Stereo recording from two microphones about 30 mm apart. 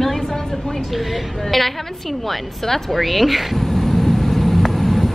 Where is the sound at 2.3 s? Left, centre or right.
Centre.